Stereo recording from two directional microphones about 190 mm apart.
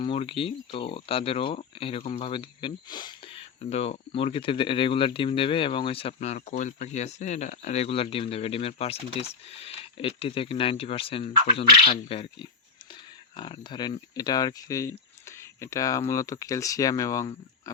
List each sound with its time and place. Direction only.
0.0 s speech: 30° left (ahead or behind)